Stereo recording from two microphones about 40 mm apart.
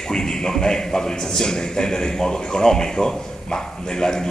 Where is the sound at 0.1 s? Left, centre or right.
Centre.